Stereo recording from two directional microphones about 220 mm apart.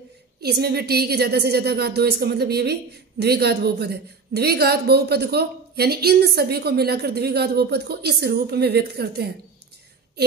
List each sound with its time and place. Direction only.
0.4 s a woman's voice: 45° right (ahead or behind)